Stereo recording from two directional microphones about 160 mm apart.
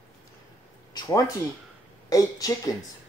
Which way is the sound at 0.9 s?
20° left (ahead or behind).